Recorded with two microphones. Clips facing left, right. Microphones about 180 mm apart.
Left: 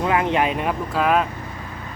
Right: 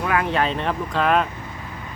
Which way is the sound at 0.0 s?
20° left (ahead or behind).